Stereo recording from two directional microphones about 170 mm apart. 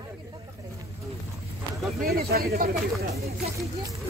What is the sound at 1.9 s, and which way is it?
Speech, 65° right (ahead or behind).